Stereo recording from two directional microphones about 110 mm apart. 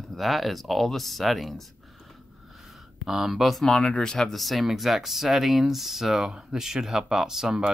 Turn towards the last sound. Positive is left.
turn(degrees=-5)  # may be behind; listen again after turning